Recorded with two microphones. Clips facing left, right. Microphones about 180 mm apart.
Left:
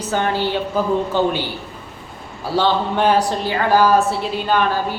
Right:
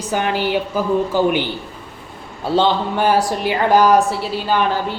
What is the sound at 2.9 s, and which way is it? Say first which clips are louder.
Speech: even; 5° right (ahead or behind).